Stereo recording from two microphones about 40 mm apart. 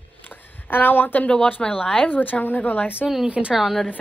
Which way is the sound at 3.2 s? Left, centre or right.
Right.